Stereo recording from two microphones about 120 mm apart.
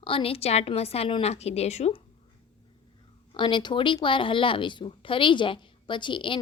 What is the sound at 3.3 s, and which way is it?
A woman's voice, 40° left (ahead or behind).